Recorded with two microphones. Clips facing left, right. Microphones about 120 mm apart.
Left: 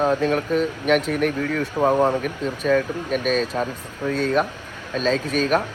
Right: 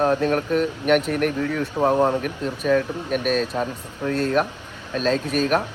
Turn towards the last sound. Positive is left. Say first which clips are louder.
# even
turn(degrees=-10)  # may be behind; listen again after turning